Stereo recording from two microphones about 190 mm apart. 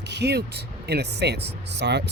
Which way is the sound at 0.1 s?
65° right (ahead or behind).